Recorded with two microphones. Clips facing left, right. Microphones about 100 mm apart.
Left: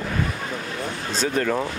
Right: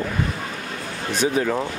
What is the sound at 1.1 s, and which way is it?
Speech, 10° right (ahead or behind).